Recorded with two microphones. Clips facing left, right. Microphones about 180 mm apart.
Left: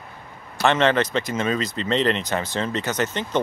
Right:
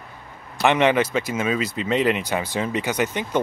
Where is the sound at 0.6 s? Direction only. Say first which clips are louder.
Right 1 dB; 15° right (ahead or behind).